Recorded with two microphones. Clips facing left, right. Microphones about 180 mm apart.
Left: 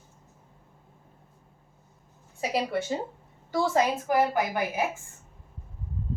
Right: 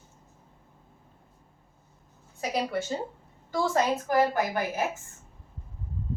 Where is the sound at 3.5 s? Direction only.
10° left (ahead or behind).